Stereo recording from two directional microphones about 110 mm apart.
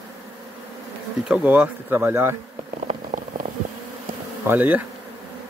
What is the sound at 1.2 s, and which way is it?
Speech, 10° right (ahead or behind).